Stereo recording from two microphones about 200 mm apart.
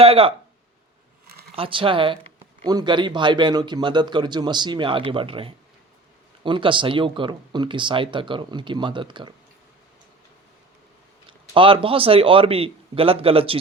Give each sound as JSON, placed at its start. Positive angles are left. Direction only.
{"t": 0.0, "sound": "speech", "side_deg": -30}
{"t": 1.3, "sound": "a sound", "side_deg": -50}
{"t": 1.5, "sound": "speech", "side_deg": -25}
{"t": 11.3, "sound": "speech", "side_deg": -25}